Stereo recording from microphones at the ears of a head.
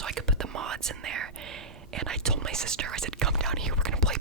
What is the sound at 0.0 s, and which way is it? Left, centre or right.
Whispering, right.